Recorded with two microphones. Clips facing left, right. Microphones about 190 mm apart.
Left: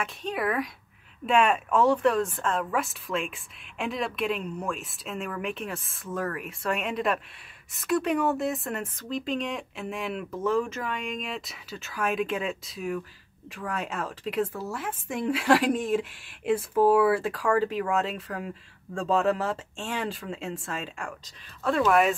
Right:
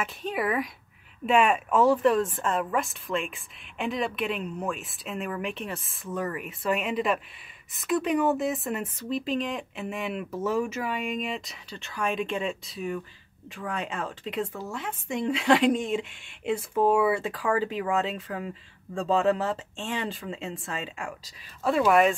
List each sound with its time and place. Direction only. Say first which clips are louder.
0.0 s speech: even; centre (ahead or behind)